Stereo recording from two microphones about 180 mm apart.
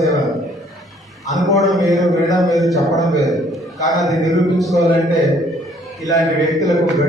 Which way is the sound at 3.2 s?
Centre (ahead or behind).